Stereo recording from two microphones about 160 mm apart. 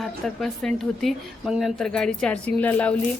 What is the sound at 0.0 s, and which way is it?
A woman's voice, centre (ahead or behind).